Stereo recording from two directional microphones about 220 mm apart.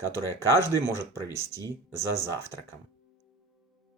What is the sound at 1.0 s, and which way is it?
Speech, 15° left (ahead or behind).